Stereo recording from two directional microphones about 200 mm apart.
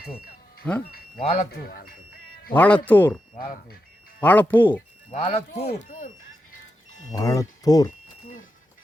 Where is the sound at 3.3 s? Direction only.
45° left (ahead or behind).